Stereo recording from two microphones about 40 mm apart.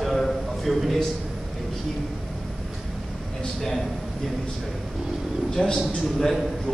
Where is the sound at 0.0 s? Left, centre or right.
Centre.